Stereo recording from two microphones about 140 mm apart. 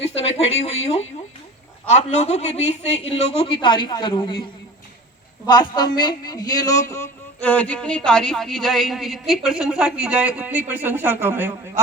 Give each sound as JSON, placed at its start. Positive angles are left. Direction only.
{"t": 0.2, "sound": "a man's voice", "side_deg": 45}
{"t": 5.5, "sound": "a man's voice", "side_deg": 30}